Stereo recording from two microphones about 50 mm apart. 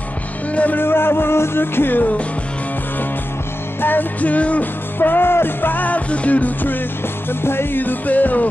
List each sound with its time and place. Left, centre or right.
0.7 s music: left
3.8 s music: left
4.9 s music: left
7.4 s music: left
7.8 s music: left